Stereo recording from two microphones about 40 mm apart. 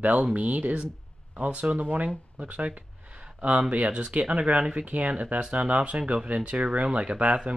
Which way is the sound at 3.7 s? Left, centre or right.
Right.